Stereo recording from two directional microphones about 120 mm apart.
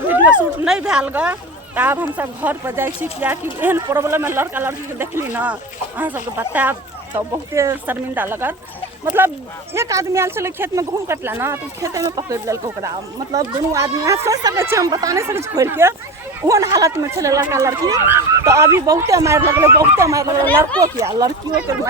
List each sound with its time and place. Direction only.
0.6 s speech: 5° right (ahead or behind); by 21.3 s 25° right (ahead or behind)